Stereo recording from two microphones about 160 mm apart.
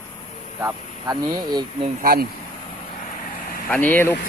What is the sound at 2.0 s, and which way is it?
Speech, 65° right (ahead or behind).